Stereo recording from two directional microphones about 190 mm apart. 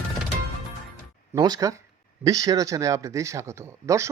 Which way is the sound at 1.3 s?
20° right (ahead or behind).